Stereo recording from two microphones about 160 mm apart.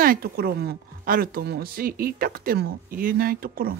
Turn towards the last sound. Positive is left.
turn(degrees=-65)  # may be behind; listen again after turning